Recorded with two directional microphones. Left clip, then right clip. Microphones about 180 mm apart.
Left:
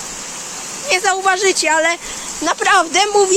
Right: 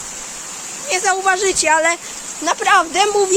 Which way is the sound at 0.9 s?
Centre (ahead or behind).